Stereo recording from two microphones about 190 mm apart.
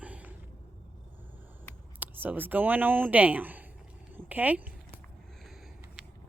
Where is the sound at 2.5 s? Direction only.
10° right (ahead or behind).